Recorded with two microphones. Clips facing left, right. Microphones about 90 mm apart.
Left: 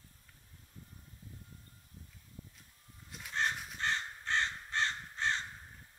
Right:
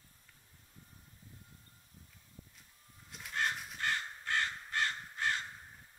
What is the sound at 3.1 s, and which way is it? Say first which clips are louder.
Crow: left 1 dB; centre (ahead or behind).